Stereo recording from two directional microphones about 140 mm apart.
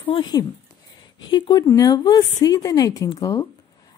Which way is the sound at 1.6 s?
20° left (ahead or behind).